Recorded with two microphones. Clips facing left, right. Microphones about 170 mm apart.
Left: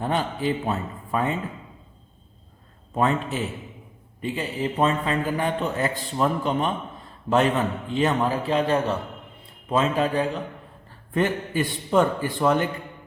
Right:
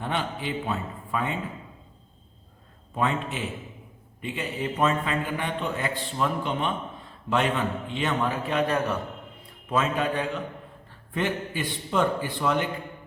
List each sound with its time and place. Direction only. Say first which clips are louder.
0.0 s a man's voice: left 5 dB; 40° left (ahead or behind)
2.9 s a man's voice: left 4 dB; 40° left (ahead or behind)
11.1 s a man's voice: left 5 dB; 45° left (ahead or behind)